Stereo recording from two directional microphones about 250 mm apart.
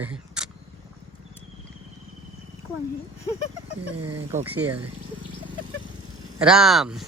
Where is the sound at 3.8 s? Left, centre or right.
Right.